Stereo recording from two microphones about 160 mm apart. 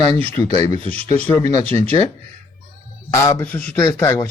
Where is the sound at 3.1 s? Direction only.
15° left (ahead or behind).